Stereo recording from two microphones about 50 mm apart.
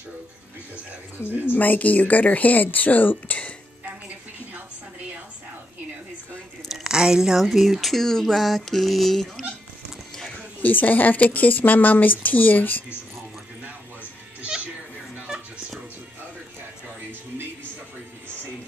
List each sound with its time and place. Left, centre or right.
1.4 s speech: left
6.7 s speech: centre
10.6 s speech: left